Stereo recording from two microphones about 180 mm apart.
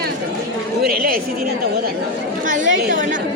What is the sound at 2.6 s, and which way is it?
Chatter, 90° right.